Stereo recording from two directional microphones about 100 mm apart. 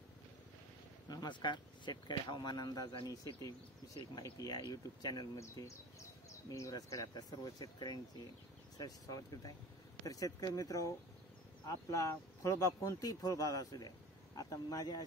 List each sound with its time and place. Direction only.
1.0 s speech: 45° left (ahead or behind)